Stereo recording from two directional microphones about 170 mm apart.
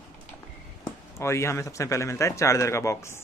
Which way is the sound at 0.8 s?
15° left (ahead or behind).